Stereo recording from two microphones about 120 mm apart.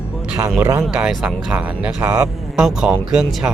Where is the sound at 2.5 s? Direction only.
5° right (ahead or behind).